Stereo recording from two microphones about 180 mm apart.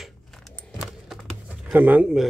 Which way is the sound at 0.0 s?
Centre (ahead or behind).